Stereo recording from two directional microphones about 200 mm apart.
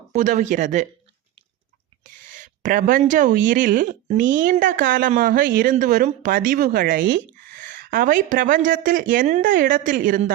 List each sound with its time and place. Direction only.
0.1 s speech: 40° right (ahead or behind)
2.0 s speech: 40° right (ahead or behind)